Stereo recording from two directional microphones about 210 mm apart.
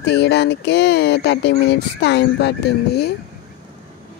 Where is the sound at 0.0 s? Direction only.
55° left (ahead or behind).